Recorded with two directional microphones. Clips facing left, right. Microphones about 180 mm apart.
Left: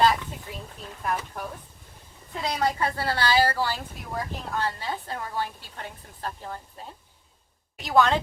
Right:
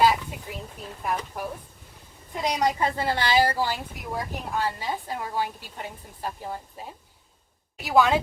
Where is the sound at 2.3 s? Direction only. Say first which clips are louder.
Right 2 dB; 15° right (ahead or behind).